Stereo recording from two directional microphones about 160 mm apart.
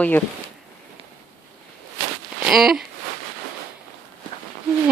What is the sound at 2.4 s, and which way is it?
Speech, centre (ahead or behind).